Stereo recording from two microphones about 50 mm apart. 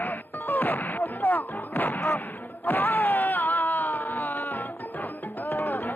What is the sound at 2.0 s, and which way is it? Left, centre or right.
Speech, left.